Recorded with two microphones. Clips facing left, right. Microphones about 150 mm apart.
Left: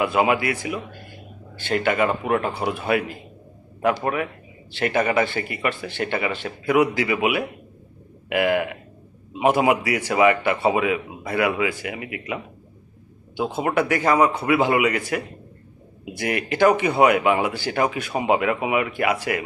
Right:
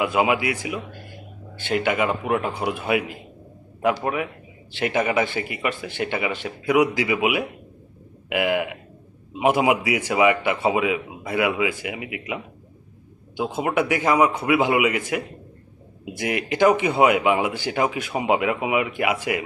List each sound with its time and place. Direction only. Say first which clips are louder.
0.0 s a man's voice: left 1 dB; 10° right (ahead or behind)